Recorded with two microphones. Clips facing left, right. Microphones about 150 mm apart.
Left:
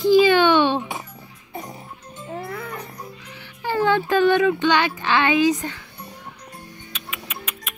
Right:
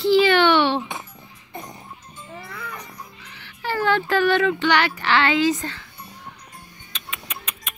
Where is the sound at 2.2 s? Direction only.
45° left (ahead or behind).